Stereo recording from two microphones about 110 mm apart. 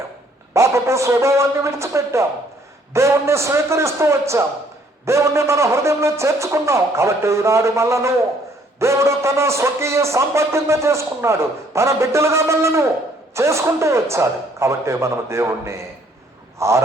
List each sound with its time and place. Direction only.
0.5 s a man's voice: 25° right (ahead or behind)